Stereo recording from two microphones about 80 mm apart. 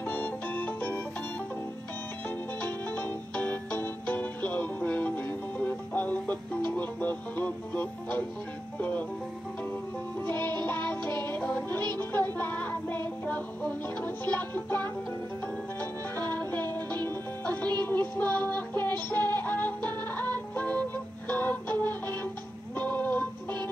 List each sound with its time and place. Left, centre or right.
0.0 s organ: left
2.9 s music: left
11.0 s music: right
11.2 s music: left
16.2 s music: left
18.1 s a sound: left
18.9 s synthetic singing: left
19.3 s music: left